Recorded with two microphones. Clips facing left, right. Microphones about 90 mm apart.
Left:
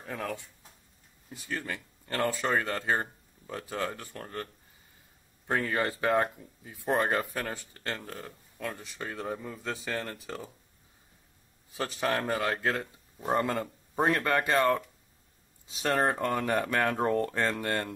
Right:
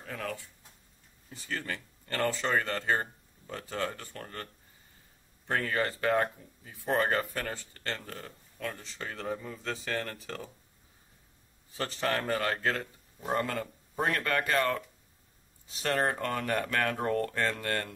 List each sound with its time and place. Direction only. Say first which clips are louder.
0.0 s speech: left 2 dB; 15° left (ahead or behind)
5.5 s speech: left 1 dB; 10° left (ahead or behind)
11.7 s speech: left 1 dB; 10° left (ahead or behind)
15.8 s speech: left 2 dB; 20° left (ahead or behind)